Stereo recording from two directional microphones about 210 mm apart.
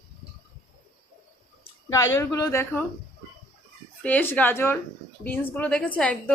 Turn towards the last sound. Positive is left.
turn(degrees=5)  # may be behind; listen again after turning